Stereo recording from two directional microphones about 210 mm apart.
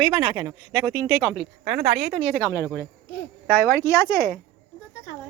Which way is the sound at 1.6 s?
35° right (ahead or behind).